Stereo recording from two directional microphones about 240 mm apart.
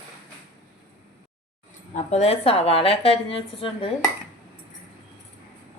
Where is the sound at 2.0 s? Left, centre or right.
Left.